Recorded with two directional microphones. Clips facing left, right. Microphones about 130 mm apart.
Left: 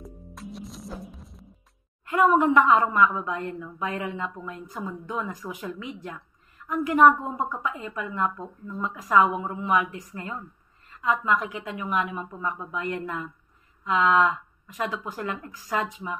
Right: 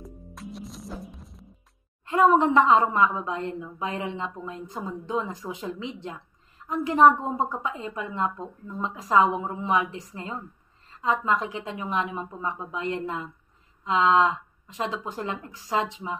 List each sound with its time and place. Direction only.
0.0 s music: centre (ahead or behind)
2.0 s a woman's voice: 30° right (ahead or behind)